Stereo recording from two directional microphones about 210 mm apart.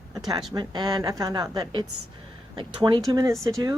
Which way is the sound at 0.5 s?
20° right (ahead or behind).